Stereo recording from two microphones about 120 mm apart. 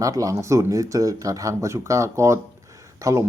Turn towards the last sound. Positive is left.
turn(degrees=-25)  # may be behind; listen again after turning